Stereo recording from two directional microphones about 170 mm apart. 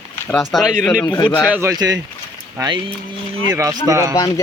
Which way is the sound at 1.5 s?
15° right (ahead or behind).